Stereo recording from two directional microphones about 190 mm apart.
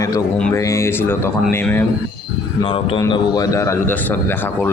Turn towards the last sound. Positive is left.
turn(degrees=15)  # may be behind; listen again after turning